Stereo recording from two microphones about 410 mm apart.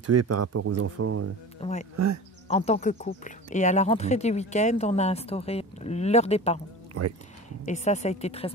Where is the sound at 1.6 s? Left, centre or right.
Centre.